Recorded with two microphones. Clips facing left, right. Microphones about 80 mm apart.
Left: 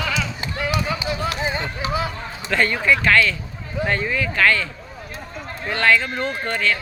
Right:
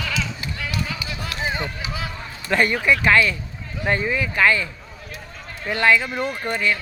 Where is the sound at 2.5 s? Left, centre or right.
Centre.